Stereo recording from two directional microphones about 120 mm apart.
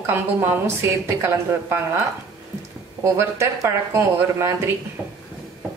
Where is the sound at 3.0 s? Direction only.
25° right (ahead or behind).